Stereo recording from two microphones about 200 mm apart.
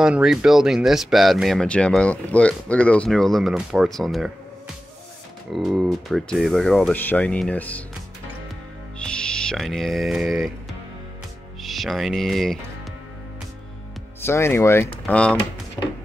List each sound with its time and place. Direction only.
0.0 s speech: 5° right (ahead or behind)
5.5 s speech: centre (ahead or behind)
8.9 s music: 5° left (ahead or behind)
11.6 s speech: centre (ahead or behind)
14.2 s speech: 10° left (ahead or behind)